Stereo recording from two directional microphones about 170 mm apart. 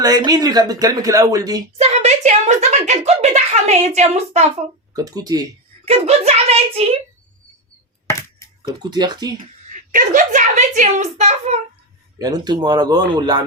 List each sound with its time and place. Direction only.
0.0 s speech: 20° right (ahead or behind)
1.8 s speech: 40° right (ahead or behind)
4.9 s speech: 20° right (ahead or behind)
5.8 s speech: 35° right (ahead or behind)
8.6 s speech: 25° right (ahead or behind)
9.6 s a woman's voice: 50° right (ahead or behind)
12.2 s speech: 25° right (ahead or behind)